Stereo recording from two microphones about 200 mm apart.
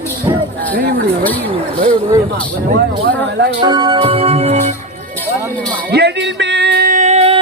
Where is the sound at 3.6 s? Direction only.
25° right (ahead or behind).